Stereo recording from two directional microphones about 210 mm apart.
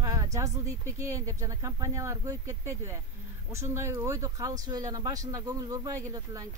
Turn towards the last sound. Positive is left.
turn(degrees=-15)  # may be behind; listen again after turning